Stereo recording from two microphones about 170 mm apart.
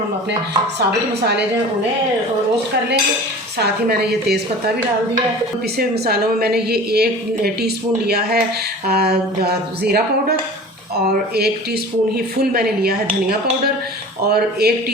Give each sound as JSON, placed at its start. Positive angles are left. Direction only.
{"t": 3.6, "sound": "a woman's voice", "side_deg": -70}
{"t": 5.7, "sound": "a woman's voice", "side_deg": -70}
{"t": 14.3, "sound": "a woman's voice", "side_deg": -65}